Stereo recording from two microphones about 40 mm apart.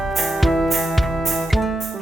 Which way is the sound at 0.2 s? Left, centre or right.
Centre.